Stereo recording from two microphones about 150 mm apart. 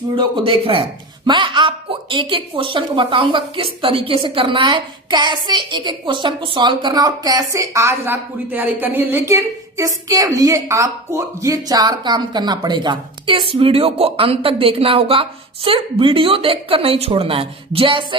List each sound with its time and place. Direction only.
0.2 s a woman's voice: 35° right (ahead or behind)